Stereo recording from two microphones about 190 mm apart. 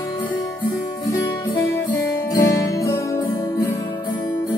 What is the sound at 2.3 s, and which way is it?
Music, 15° left (ahead or behind).